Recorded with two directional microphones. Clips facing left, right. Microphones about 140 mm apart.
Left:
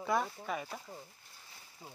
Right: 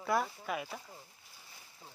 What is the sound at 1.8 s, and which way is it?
Speech, 15° left (ahead or behind).